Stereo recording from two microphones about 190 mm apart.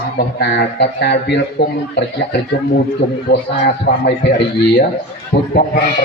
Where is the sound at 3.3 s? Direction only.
60° left (ahead or behind).